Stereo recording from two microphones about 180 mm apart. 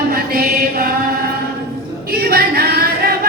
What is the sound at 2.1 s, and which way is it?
Singing, 55° right (ahead or behind).